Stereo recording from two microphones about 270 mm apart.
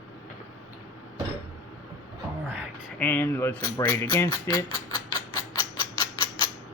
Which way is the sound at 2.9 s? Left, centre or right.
Centre.